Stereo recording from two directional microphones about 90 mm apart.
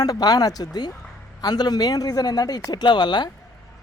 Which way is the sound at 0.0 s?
45° left (ahead or behind).